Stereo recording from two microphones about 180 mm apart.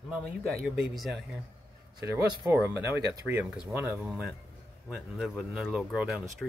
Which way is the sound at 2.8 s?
15° right (ahead or behind).